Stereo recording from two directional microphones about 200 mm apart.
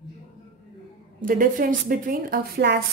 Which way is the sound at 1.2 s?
45° right (ahead or behind).